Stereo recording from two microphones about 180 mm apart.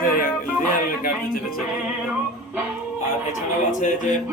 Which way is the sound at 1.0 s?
55° left (ahead or behind).